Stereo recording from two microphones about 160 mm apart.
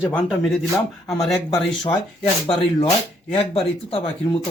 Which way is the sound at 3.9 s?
35° left (ahead or behind).